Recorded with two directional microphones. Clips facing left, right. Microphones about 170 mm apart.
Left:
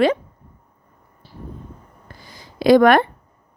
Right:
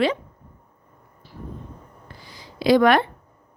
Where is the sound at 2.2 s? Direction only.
45° left (ahead or behind).